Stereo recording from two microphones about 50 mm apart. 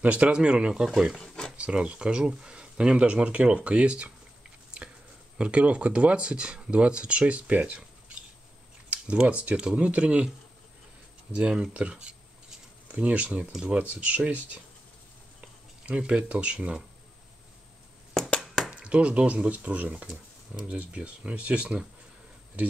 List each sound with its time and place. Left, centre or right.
0.0 s speech: right
0.8 s speech: centre
1.2 s speech: centre
1.6 s speech: right
5.4 s speech: right
11.3 s speech: centre
15.8 s speech: right
18.7 s speech: right